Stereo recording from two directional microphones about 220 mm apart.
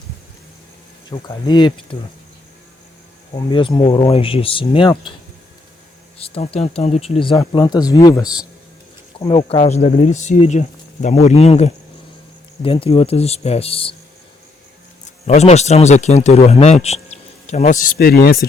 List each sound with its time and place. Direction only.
1.1 s speech: 20° left (ahead or behind)
3.3 s speech: 20° left (ahead or behind)
6.1 s speech: 25° left (ahead or behind)
8.2 s speech: 5° right (ahead or behind)
9.1 s speech: 25° left (ahead or behind)
15.3 s speech: 30° left (ahead or behind)